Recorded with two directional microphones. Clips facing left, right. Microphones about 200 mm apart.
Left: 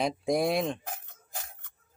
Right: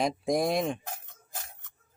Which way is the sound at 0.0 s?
Centre (ahead or behind).